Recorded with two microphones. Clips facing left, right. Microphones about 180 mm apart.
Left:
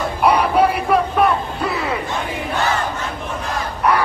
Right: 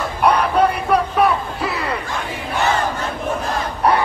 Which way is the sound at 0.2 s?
10° left (ahead or behind).